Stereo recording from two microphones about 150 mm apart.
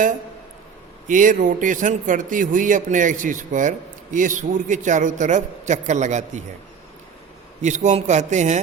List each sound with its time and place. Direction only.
1.0 s speech: 60° right (ahead or behind)
7.6 s a man's voice: 50° right (ahead or behind)